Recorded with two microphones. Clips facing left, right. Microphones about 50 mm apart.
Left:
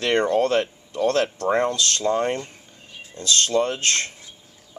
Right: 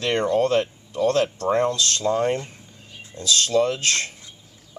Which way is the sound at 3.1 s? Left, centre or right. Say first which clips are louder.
Right 1 dB; centre.